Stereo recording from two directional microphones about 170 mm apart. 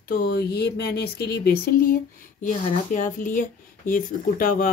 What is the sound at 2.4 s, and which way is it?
A woman's voice, 50° left (ahead or behind).